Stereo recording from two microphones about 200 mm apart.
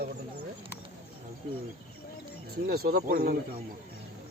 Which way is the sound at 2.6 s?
50° right (ahead or behind).